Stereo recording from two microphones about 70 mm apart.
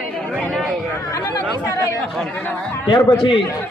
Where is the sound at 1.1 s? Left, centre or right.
Left.